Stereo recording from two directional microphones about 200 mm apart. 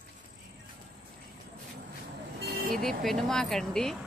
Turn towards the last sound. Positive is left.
turn(degrees=0)  # may be behind; listen again after turning